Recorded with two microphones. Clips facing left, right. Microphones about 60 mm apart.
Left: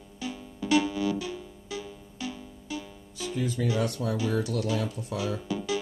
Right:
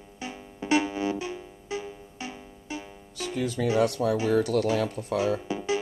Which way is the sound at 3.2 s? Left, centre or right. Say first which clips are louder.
Right 1 dB; right.